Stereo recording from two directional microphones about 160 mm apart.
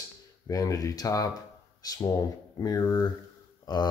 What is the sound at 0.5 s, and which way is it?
Speech, 20° left (ahead or behind).